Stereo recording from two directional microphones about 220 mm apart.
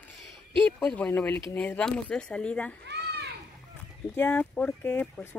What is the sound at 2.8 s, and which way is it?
Children playing, 50° right (ahead or behind).